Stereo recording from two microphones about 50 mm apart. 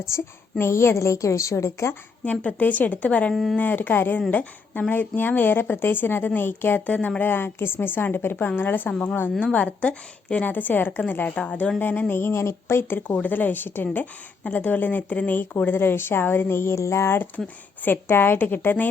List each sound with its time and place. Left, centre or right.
0.1 s a woman's voice: left
0.6 s a woman's voice: left
2.2 s a woman's voice: left
3.3 s speech: centre
3.6 s a woman's voice: left
7.2 s a woman's voice: left
9.4 s a woman's voice: left
11.3 s a woman's voice: left
11.8 s a woman's voice: left
13.2 s a woman's voice: left
17.8 s a woman's voice: left